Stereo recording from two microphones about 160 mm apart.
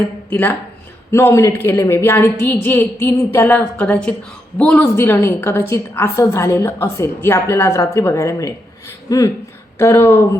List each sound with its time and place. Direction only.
0.3 s a woman's voice: 10° left (ahead or behind)